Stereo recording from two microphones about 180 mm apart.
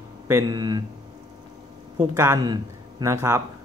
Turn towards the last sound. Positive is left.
turn(degrees=-15)  # may be behind; listen again after turning